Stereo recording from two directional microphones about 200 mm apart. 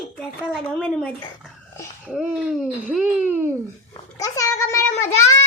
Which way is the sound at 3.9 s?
15° left (ahead or behind).